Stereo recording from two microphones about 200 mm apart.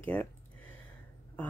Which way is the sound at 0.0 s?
10° left (ahead or behind).